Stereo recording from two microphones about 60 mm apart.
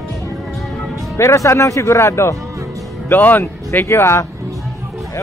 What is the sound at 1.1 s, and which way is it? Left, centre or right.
Speech, left.